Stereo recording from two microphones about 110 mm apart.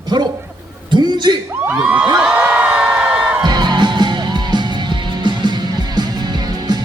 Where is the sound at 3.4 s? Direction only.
40° right (ahead or behind).